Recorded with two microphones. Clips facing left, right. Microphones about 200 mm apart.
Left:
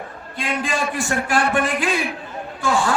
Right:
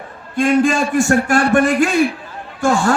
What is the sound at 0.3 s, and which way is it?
A man's voice, 45° right (ahead or behind).